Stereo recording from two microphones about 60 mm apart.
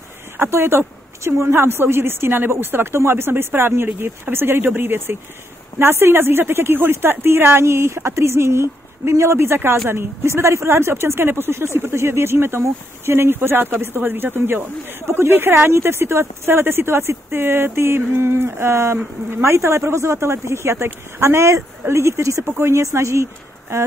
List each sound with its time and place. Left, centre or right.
0.4 s a woman's voice: right